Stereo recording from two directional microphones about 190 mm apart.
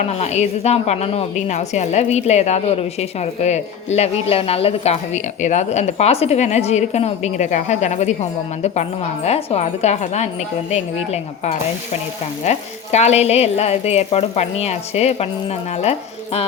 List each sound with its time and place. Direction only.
0.2 s a woman's voice: 35° left (ahead or behind)